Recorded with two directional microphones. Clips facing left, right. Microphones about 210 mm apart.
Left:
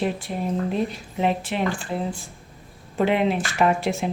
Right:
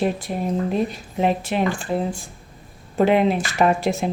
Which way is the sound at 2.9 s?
40° right (ahead or behind).